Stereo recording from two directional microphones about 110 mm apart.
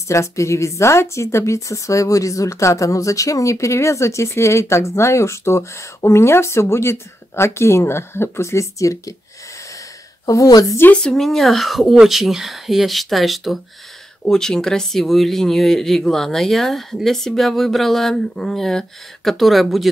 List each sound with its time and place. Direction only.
0.1 s speech: 25° left (ahead or behind)
10.2 s a woman's voice: 30° left (ahead or behind)
10.8 s speech: 10° left (ahead or behind)